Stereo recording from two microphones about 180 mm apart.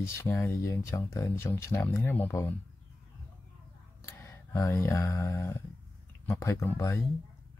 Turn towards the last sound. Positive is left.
turn(degrees=15)  # may be behind; listen again after turning